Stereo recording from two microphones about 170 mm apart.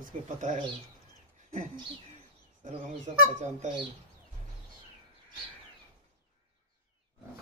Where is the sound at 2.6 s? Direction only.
45° right (ahead or behind).